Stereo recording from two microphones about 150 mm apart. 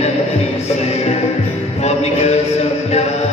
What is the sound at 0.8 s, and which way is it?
Music, 45° left (ahead or behind).